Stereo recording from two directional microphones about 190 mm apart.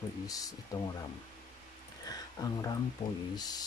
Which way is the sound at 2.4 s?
20° left (ahead or behind).